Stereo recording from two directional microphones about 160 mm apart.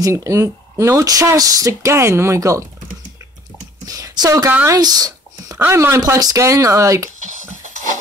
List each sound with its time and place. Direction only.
0.0 s speech: 20° right (ahead or behind)
3.8 s speech: 20° right (ahead or behind)
7.2 s a sound: 50° right (ahead or behind)